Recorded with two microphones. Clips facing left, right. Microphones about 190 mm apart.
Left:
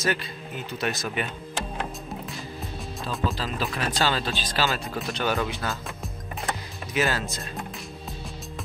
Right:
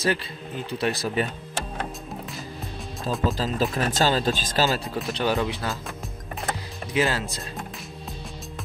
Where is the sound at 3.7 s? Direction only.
40° right (ahead or behind).